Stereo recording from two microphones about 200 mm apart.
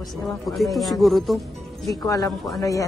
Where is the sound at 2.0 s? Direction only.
15° left (ahead or behind).